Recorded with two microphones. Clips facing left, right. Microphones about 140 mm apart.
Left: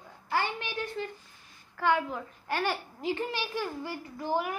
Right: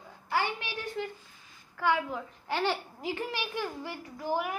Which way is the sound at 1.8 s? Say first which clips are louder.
Left 1 dB; 10° right (ahead or behind).